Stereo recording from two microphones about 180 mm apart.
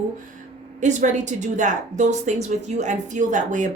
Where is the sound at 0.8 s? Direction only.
40° right (ahead or behind).